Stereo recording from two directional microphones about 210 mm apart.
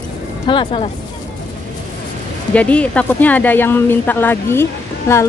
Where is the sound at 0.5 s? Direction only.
25° left (ahead or behind).